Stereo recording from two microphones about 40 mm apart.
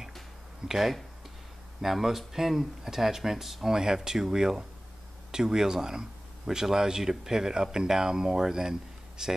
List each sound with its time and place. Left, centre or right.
0.7 s speech: centre